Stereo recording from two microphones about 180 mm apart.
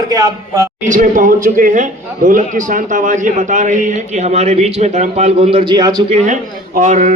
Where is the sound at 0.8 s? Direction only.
45° right (ahead or behind); by 6.0 s 25° right (ahead or behind).